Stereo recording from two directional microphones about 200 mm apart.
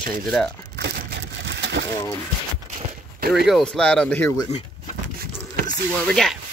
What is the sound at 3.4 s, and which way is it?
Speech, centre (ahead or behind).